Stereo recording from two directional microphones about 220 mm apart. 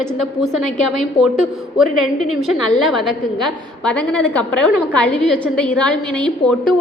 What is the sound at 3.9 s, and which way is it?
A woman's voice, 5° left (ahead or behind).